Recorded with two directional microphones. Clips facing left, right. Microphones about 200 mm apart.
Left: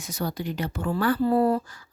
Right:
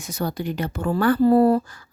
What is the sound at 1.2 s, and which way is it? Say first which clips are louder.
Speech: right 7 dB; 40° right (ahead or behind).